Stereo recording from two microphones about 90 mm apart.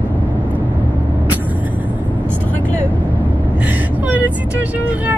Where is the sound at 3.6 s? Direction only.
20° right (ahead or behind).